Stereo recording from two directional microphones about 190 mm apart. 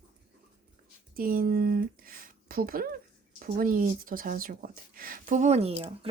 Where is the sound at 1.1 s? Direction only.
50° right (ahead or behind).